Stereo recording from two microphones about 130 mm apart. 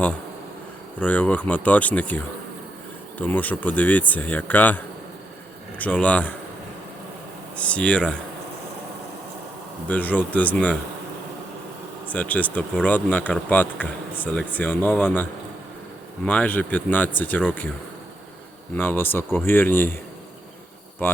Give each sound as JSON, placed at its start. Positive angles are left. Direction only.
{"t": 0.9, "sound": "speech", "side_deg": 10}
{"t": 5.8, "sound": "speech", "side_deg": 10}
{"t": 7.5, "sound": "speech", "side_deg": 10}
{"t": 9.9, "sound": "speech", "side_deg": 10}
{"t": 12.0, "sound": "speech", "side_deg": 10}
{"t": 18.7, "sound": "speech", "side_deg": 15}